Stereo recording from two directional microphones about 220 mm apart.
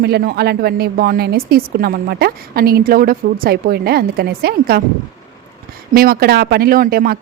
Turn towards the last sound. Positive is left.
turn(degrees=-45)  # may be behind; listen again after turning